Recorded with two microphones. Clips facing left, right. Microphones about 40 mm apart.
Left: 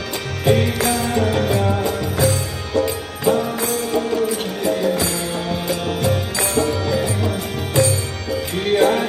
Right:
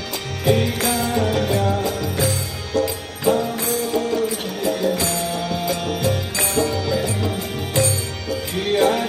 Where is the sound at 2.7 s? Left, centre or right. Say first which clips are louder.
Left 2 dB; left.